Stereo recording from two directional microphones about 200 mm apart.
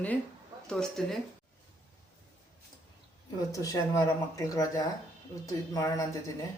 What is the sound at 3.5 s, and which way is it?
Speech, 15° left (ahead or behind).